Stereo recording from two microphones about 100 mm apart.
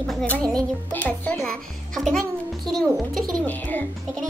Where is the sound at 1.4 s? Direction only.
Centre (ahead or behind).